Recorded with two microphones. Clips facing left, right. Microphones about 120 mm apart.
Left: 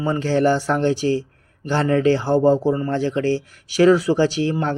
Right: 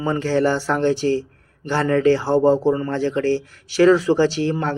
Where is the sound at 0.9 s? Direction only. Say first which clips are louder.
Even; 15° left (ahead or behind).